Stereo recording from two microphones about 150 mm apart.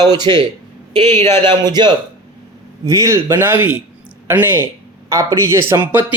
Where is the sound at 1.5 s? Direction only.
30° right (ahead or behind).